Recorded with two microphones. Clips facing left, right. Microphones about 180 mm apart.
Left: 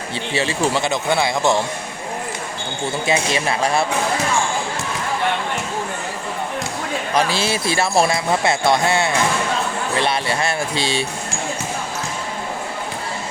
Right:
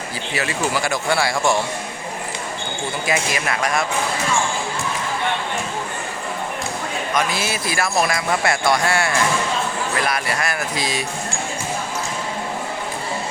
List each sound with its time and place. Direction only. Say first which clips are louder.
0.3 s speech: left 3 dB; 30° left (ahead or behind)
3.1 s speech: left 3 dB; 30° left (ahead or behind)
7.1 s speech: left 3 dB; 30° left (ahead or behind)